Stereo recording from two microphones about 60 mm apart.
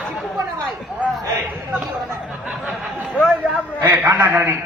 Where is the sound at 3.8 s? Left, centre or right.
Right.